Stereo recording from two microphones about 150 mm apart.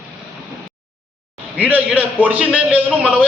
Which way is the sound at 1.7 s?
10° right (ahead or behind).